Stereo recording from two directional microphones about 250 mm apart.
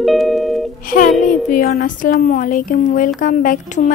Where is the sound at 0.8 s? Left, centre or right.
Left.